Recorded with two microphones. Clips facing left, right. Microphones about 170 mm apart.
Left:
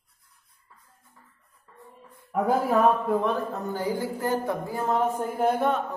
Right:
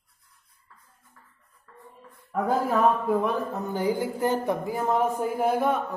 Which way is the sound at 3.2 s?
15° right (ahead or behind).